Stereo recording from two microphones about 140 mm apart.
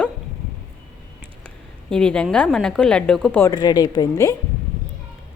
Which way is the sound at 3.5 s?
30° left (ahead or behind).